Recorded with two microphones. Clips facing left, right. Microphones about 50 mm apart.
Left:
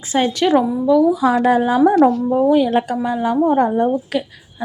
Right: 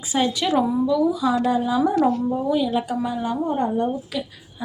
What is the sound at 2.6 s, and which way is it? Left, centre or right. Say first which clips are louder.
Speech: left 5 dB; left.